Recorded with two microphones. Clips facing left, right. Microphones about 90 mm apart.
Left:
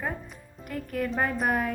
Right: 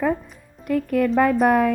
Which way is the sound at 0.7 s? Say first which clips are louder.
Right 10 dB; 90° right.